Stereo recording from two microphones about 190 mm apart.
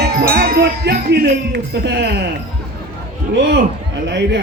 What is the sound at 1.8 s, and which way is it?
Speech, 65° right (ahead or behind).